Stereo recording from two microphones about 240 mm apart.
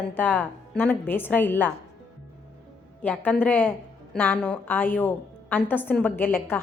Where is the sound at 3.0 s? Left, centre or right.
Centre.